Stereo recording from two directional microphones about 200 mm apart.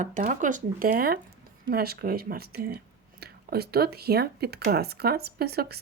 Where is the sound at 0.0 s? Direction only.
40° right (ahead or behind).